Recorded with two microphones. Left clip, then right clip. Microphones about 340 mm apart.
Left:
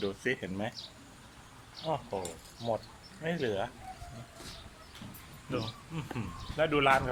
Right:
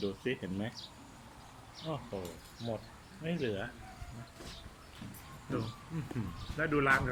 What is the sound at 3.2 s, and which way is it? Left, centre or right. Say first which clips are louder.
Speech: left 4 dB; centre.